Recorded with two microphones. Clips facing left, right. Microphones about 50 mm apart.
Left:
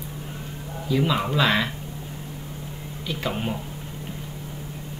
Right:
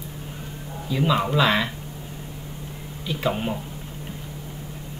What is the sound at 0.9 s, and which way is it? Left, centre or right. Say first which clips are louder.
Speech: right 1 dB; centre.